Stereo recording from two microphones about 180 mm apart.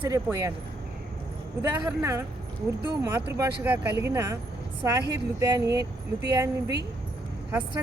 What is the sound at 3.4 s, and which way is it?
Speech, 10° right (ahead or behind).